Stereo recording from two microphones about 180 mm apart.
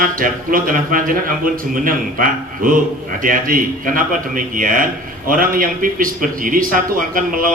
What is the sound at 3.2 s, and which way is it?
A man's voice, 50° right (ahead or behind).